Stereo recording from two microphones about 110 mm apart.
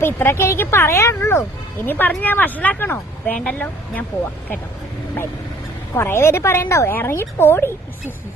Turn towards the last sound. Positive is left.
turn(degrees=20)  # may be behind; listen again after turning